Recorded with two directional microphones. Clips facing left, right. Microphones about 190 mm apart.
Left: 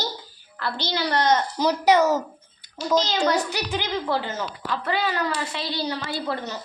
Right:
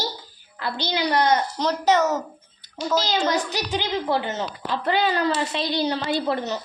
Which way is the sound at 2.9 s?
15° right (ahead or behind).